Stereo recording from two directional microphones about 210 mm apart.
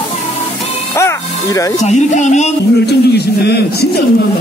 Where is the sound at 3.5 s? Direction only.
50° left (ahead or behind).